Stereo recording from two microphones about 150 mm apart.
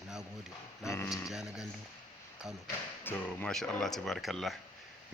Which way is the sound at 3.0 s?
10° left (ahead or behind).